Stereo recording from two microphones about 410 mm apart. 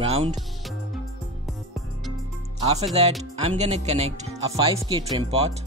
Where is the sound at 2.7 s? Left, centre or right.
Centre.